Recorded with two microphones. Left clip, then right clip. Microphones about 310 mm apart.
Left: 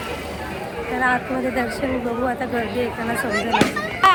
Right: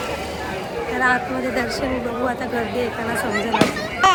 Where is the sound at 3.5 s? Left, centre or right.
Left.